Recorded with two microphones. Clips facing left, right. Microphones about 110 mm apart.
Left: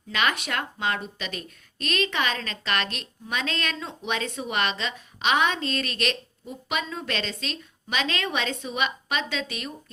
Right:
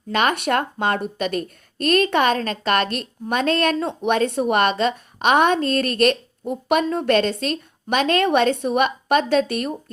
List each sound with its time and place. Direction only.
0.1 s speech: 50° right (ahead or behind)